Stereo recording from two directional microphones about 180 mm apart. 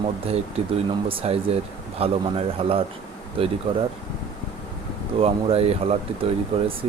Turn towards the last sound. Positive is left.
turn(degrees=-30)  # may be behind; listen again after turning